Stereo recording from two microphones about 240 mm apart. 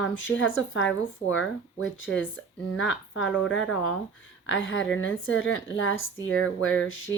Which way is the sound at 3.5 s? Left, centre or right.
Left.